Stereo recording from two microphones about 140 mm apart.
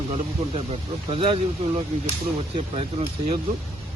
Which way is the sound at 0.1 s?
45° right (ahead or behind).